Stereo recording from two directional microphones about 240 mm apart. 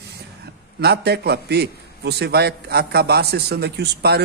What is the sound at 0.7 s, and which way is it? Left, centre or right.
A man's voice, right.